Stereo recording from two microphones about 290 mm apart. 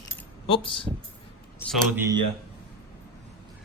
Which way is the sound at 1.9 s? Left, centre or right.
Centre.